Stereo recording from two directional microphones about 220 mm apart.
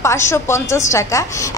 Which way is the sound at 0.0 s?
10° left (ahead or behind).